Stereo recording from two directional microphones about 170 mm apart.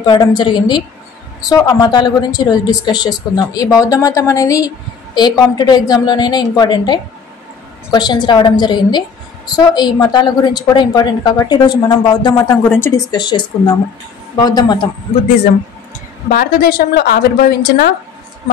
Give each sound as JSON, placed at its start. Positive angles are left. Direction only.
{"t": 0.0, "sound": "a woman's voice", "side_deg": 25}
{"t": 12.4, "sound": "a woman's voice", "side_deg": 20}
{"t": 16.3, "sound": "a woman's voice", "side_deg": 60}